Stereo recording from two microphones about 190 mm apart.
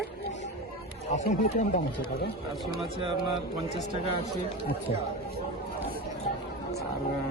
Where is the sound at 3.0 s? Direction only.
25° right (ahead or behind).